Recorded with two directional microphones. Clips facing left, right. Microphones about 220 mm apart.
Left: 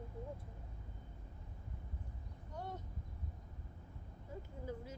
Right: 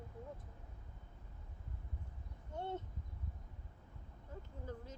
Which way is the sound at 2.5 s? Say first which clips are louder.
Right 4 dB; 25° right (ahead or behind).